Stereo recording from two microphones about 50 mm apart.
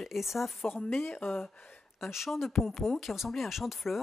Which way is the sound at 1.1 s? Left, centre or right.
Left.